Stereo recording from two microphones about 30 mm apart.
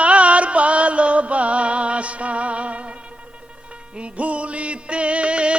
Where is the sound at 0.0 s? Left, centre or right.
Right.